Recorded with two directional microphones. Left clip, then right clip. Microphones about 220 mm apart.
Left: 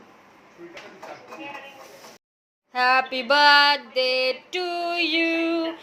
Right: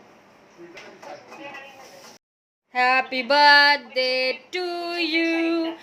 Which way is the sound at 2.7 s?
15° right (ahead or behind).